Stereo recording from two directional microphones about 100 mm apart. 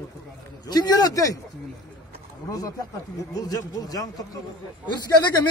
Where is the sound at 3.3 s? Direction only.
40° left (ahead or behind).